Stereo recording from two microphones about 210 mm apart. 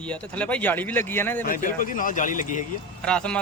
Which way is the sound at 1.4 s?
40° left (ahead or behind).